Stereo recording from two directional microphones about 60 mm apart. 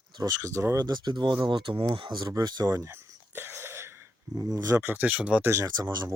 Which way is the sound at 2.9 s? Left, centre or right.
Right.